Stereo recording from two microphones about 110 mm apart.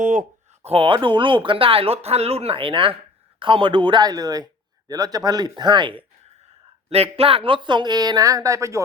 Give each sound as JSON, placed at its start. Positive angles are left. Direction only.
{"t": 0.6, "sound": "speech", "side_deg": -60}
{"t": 6.9, "sound": "speech", "side_deg": -65}